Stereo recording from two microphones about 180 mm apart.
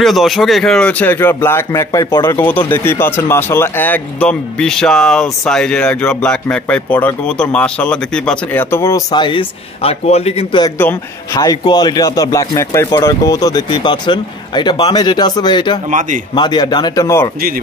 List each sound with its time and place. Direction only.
0.0 s speech: centre (ahead or behind); by 10.6 s 35° left (ahead or behind)
10.8 s a man's voice: 15° left (ahead or behind)
15.9 s speech: 45° right (ahead or behind)
16.3 s a man's voice: 25° left (ahead or behind)